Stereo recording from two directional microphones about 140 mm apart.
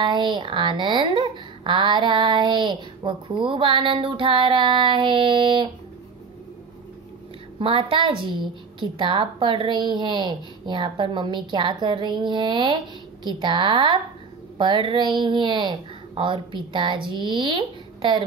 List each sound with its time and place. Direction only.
0.0 s speech: 35° right (ahead or behind)
7.5 s speech: 40° right (ahead or behind)